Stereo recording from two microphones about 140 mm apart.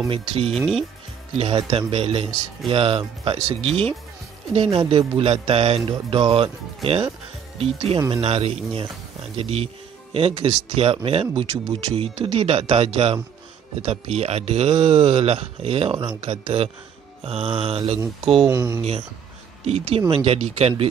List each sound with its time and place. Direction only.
0.1 s speech: 40° right (ahead or behind)
0.5 s speech: centre (ahead or behind)
1.3 s speech: 45° right (ahead or behind)
18.5 s speech: 20° right (ahead or behind)
19.6 s speech: 45° right (ahead or behind)